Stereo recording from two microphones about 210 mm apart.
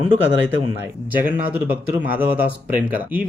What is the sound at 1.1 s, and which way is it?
Speech, 10° right (ahead or behind).